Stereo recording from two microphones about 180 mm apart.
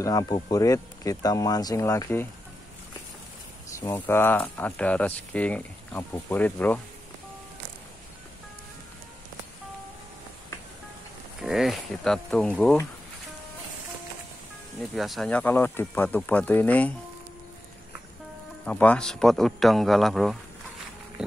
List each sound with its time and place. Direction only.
0.0 s speech: 20° left (ahead or behind)
3.8 s speech: 15° left (ahead or behind)
11.4 s speech: centre (ahead or behind)
14.8 s speech: centre (ahead or behind)
18.7 s speech: 5° left (ahead or behind)